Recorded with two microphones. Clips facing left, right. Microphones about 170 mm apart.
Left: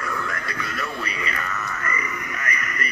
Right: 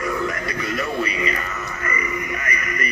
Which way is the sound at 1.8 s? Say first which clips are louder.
Right 4 dB; 10° right (ahead or behind).